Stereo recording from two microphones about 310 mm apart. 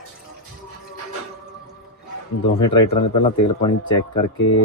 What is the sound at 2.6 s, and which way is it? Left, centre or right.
Speech, centre.